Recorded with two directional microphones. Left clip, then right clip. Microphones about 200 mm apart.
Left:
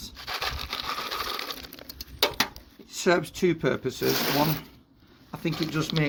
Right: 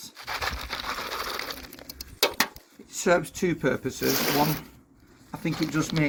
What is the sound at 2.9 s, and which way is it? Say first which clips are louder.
Speech: right 1 dB; 50° left (ahead or behind).